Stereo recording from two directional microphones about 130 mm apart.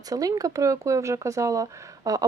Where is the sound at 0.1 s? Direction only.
30° right (ahead or behind).